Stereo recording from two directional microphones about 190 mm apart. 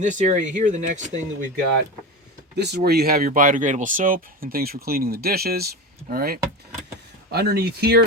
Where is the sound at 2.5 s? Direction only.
60° right (ahead or behind).